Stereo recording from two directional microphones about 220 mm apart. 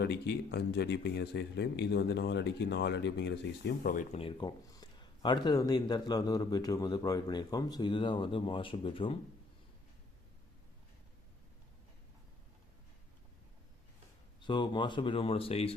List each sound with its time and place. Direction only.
0.0 s speech: 50° left (ahead or behind)
4.2 s speech: 20° left (ahead or behind)
14.4 s speech: 20° left (ahead or behind)